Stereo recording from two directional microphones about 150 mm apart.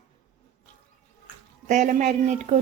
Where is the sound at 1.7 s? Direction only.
55° right (ahead or behind).